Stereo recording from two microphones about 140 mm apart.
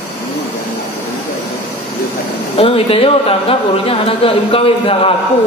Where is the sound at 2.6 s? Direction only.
40° left (ahead or behind).